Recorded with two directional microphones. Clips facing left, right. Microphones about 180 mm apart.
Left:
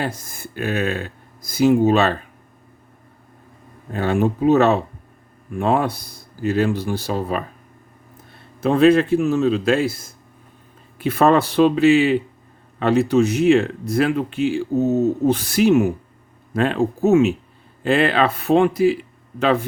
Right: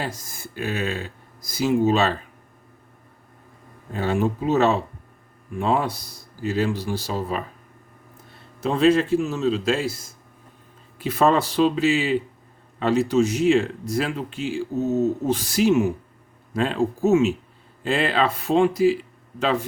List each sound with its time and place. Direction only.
0.0 s speech: 55° left (ahead or behind)
3.9 s speech: 55° left (ahead or behind)
8.6 s speech: 60° left (ahead or behind)